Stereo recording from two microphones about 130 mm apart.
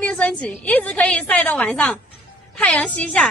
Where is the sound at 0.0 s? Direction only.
10° left (ahead or behind).